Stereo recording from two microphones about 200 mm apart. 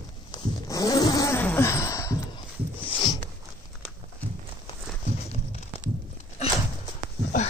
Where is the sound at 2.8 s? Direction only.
25° left (ahead or behind).